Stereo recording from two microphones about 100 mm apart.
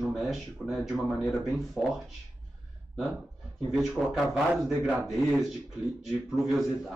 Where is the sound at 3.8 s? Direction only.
5° right (ahead or behind).